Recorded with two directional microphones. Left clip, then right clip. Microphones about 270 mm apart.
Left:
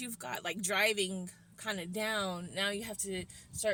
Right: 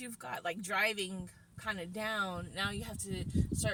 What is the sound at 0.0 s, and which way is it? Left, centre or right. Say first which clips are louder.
Speech: even; left.